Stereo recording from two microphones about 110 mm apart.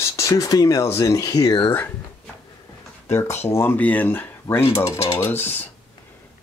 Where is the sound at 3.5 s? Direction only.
20° left (ahead or behind).